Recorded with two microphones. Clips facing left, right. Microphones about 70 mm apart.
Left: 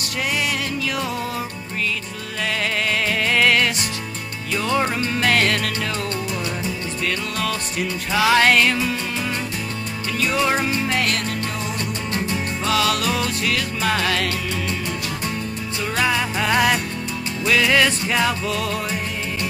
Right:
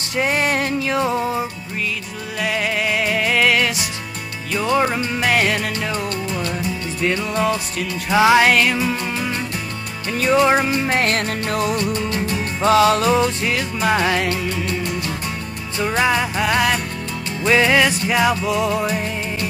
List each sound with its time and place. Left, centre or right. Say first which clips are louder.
0.2 s music: right 5 dB; right
3.1 s music: even; centre
7.0 s music: right 6 dB; right
8.4 s music: right 1 dB; centre
8.7 s music: right 2 dB; centre
10.1 s music: right 6 dB; right
10.9 s music: right 3 dB; right
12.6 s music: right 7 dB; right
15.8 s music: right 4 dB; right
16.3 s music: even; centre
17.5 s music: right 3 dB; right
17.7 s music: right 2 dB; centre